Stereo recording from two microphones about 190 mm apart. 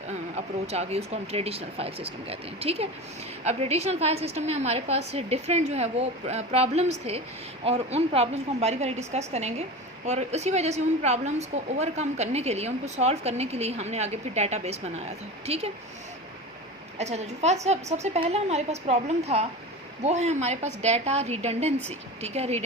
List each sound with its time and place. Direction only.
0.3 s a woman's voice: 35° right (ahead or behind)
17.0 s a woman's voice: 35° right (ahead or behind)